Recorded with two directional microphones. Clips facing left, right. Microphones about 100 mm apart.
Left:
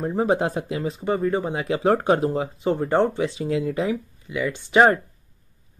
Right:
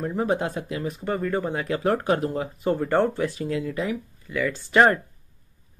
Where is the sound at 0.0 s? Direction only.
30° left (ahead or behind).